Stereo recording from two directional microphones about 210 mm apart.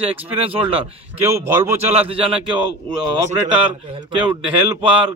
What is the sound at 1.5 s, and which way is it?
Speech, 10° right (ahead or behind).